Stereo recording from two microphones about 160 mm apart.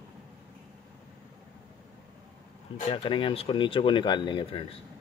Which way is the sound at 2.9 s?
30° left (ahead or behind).